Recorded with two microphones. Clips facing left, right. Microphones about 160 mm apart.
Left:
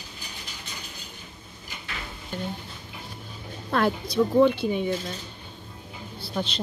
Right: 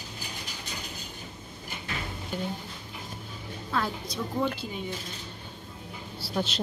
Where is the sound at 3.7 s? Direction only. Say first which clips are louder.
Left 8 dB; 70° left (ahead or behind).